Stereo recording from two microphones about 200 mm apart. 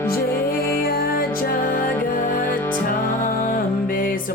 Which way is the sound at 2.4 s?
10° left (ahead or behind).